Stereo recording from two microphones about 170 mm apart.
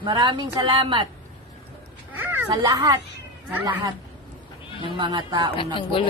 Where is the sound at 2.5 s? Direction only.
25° right (ahead or behind).